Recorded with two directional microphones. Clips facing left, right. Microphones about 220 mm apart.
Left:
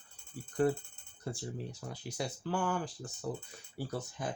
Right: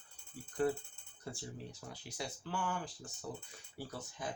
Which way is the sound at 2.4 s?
40° left (ahead or behind).